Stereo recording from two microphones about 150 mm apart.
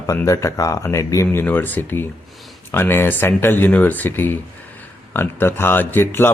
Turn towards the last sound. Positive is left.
turn(degrees=15)  # may be behind; listen again after turning